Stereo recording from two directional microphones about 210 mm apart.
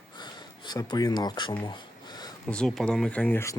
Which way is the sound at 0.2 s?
20° left (ahead or behind).